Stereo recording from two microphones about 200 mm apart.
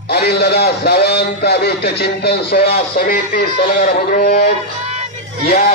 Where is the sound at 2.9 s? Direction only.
45° left (ahead or behind).